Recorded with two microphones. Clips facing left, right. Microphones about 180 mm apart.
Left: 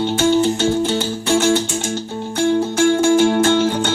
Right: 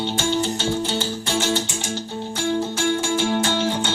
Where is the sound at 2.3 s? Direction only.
50° left (ahead or behind).